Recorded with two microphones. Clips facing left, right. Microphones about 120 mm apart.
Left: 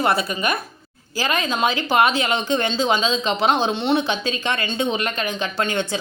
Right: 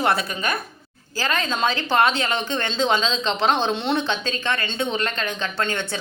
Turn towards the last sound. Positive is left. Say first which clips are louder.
# left 3 dB
turn(degrees=15)  # may be behind; listen again after turning